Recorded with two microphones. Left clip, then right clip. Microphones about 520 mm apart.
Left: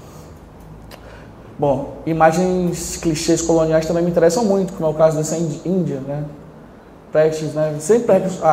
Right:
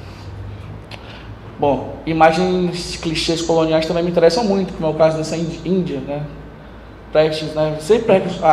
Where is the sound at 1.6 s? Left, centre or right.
Left.